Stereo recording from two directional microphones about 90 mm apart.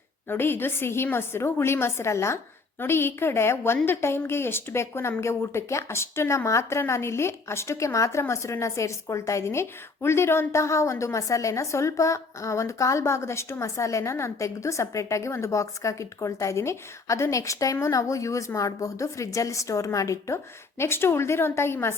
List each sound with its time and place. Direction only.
0.3 s a woman's voice: 25° left (ahead or behind)